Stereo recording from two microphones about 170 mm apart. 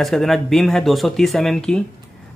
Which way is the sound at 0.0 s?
Centre (ahead or behind).